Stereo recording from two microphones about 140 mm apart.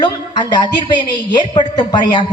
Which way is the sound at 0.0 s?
30° left (ahead or behind).